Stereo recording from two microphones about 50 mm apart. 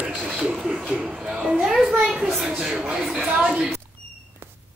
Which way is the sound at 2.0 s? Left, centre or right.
Centre.